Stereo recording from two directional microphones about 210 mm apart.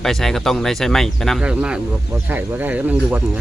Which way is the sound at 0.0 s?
Centre (ahead or behind).